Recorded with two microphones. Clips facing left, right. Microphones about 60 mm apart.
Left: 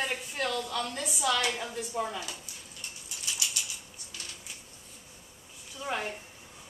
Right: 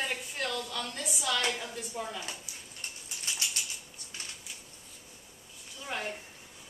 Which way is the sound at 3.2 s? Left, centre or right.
Right.